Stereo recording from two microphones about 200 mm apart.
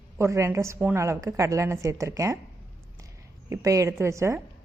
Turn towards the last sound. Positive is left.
turn(degrees=-15)  # may be behind; listen again after turning